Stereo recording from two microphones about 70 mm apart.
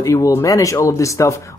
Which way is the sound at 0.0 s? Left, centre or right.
Left.